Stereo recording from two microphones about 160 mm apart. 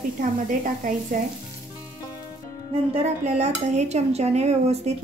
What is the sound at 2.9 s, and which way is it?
Dishes, 40° right (ahead or behind).